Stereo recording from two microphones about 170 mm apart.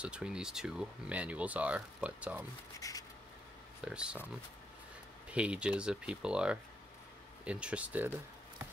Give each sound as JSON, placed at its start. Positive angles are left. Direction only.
{"t": 0.0, "sound": "speech", "side_deg": -5}
{"t": 2.8, "sound": "a sound", "side_deg": 20}
{"t": 3.8, "sound": "speech", "side_deg": -5}
{"t": 5.3, "sound": "speech", "side_deg": -5}